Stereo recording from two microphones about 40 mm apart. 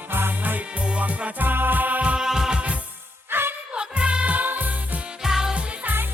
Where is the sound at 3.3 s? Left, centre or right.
Right.